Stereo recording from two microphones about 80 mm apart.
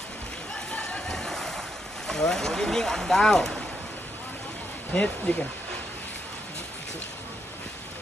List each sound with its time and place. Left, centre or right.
0.7 s a sound: centre
2.0 s speech: centre
4.9 s speech: centre